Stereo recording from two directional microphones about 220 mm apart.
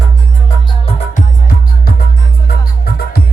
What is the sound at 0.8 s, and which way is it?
Music, 35° left (ahead or behind).